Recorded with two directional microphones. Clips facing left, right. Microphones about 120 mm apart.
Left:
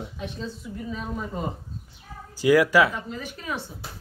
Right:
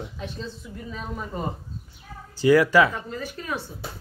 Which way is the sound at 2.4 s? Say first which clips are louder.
Right 1 dB; 10° left (ahead or behind).